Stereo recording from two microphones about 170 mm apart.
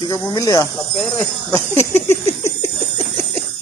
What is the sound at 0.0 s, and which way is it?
Speech, 20° left (ahead or behind).